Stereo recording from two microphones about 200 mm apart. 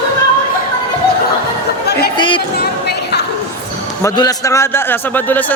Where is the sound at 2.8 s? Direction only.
55° left (ahead or behind).